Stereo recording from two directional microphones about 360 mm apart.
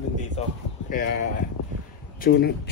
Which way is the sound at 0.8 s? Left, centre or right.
Left.